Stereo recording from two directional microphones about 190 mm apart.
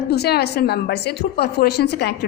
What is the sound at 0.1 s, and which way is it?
A woman's voice, 60° left (ahead or behind).